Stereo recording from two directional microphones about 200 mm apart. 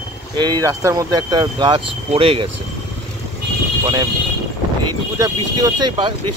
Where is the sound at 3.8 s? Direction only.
20° right (ahead or behind).